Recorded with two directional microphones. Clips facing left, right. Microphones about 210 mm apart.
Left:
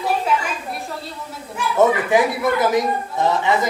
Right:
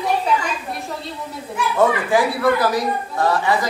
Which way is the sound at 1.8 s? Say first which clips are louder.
Left 2 dB; 20° left (ahead or behind).